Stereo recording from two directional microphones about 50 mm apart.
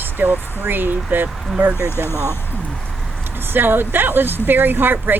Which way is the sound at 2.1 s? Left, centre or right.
Left.